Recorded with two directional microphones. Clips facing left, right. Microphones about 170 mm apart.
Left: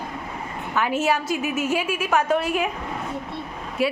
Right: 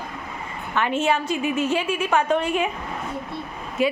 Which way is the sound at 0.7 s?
5° left (ahead or behind).